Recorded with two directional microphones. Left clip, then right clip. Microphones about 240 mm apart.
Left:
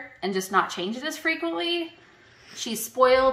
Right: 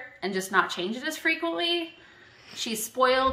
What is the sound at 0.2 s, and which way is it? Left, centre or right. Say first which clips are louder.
A woman's voice: left 1 dB; centre.